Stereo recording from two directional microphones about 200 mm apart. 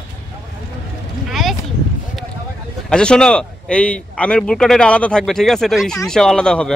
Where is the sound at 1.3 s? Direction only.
Centre (ahead or behind).